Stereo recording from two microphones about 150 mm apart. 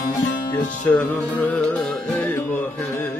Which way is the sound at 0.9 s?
5° left (ahead or behind).